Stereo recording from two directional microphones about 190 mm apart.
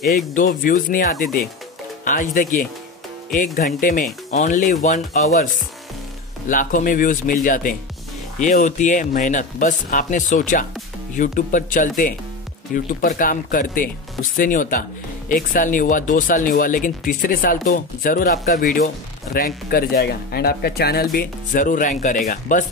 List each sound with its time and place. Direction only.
0.3 s speech: 45° left (ahead or behind)
6.5 s speech: 45° left (ahead or behind)